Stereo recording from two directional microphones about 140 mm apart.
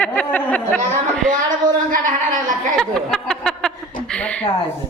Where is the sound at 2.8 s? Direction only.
5° left (ahead or behind).